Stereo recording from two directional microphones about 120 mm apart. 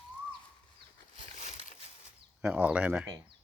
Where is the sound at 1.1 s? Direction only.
90° left.